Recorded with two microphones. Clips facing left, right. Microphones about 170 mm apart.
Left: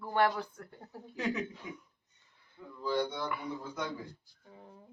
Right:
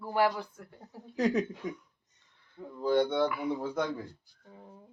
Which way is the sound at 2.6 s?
45° right (ahead or behind).